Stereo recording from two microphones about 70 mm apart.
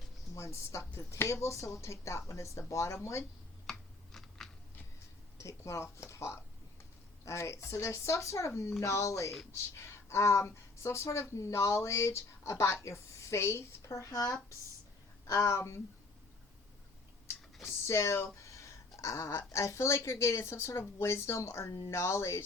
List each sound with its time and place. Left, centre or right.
0.3 s speech: left
3.7 s computer keyboard: centre
5.4 s speech: left
17.8 s a sound: left
19.5 s speech: left